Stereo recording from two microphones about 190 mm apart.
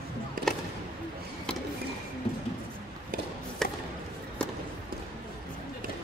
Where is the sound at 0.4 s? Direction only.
50° right (ahead or behind).